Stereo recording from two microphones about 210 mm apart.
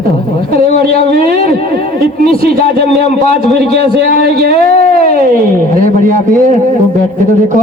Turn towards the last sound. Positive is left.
turn(degrees=-40)  # may be behind; listen again after turning